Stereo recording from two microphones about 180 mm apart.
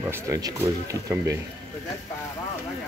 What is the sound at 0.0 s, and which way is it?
Speech, 15° right (ahead or behind).